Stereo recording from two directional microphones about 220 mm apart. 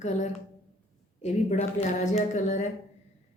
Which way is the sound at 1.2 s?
30° left (ahead or behind).